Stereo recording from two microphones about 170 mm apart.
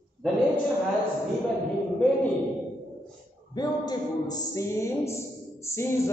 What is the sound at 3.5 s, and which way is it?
Speech, 25° left (ahead or behind).